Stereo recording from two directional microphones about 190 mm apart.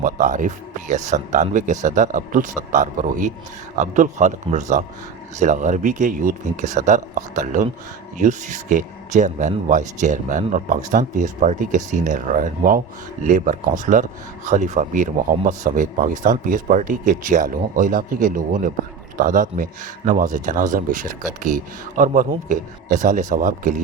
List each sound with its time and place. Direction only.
0.0 s speech: 45° right (ahead or behind)